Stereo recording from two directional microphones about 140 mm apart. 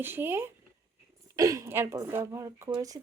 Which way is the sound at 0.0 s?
15° right (ahead or behind).